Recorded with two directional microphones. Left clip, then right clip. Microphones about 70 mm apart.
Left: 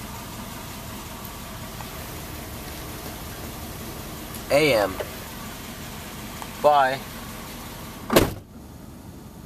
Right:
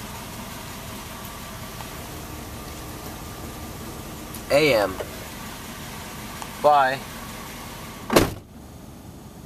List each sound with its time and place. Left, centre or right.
4.5 s speech: centre
6.6 s speech: centre
8.1 s power windows: right